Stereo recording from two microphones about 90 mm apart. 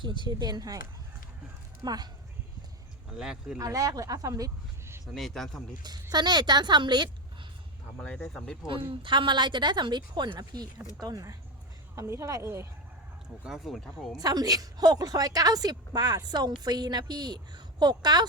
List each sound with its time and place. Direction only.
0.0 s a woman's voice: 60° right (ahead or behind)
1.8 s a woman's voice: 50° right (ahead or behind)
3.2 s speech: 5° right (ahead or behind)
3.6 s speech: 40° right (ahead or behind)
5.1 s speech: centre (ahead or behind)
5.8 s a woman's voice: 50° right (ahead or behind)
7.9 s speech: 15° left (ahead or behind)
8.9 s a woman's voice: 65° right (ahead or behind); by 11.3 s 45° right (ahead or behind)
11.9 s speech: 35° right (ahead or behind)
13.4 s speech: 5° right (ahead or behind)
14.2 s a woman's voice: 45° right (ahead or behind)